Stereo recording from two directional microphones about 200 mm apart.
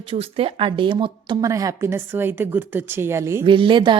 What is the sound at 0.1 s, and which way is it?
Speech, 30° right (ahead or behind).